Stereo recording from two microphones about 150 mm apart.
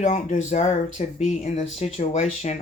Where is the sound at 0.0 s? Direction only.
50° left (ahead or behind).